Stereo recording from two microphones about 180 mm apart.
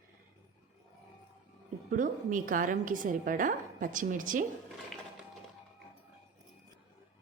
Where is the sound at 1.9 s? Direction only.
50° right (ahead or behind).